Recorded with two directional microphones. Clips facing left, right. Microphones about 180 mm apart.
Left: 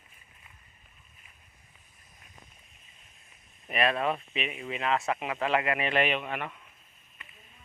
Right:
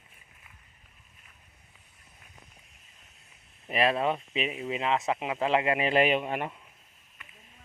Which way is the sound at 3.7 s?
25° right (ahead or behind).